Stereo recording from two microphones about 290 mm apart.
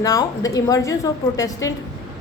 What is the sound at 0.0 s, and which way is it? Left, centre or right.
A woman's voice, centre.